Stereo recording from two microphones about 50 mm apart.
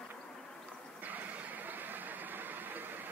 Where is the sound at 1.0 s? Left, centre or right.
Right.